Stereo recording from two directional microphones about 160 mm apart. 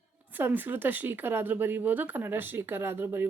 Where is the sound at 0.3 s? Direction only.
10° right (ahead or behind).